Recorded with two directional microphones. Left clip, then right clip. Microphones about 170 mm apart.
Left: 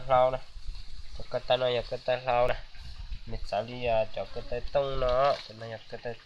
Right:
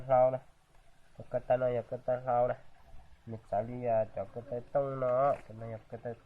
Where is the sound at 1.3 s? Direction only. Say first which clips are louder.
Left 3 dB; 35° left (ahead or behind); by 2.6 s 55° left (ahead or behind).